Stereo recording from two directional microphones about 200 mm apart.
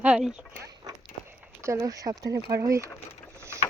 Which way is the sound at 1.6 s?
15° right (ahead or behind).